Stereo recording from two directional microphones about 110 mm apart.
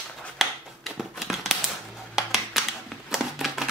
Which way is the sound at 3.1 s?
5° right (ahead or behind).